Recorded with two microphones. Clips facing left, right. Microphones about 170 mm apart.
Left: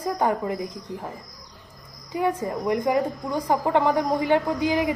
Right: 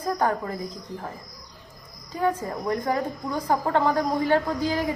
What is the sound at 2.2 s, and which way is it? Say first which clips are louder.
A woman's voice: left 1 dB; 15° left (ahead or behind).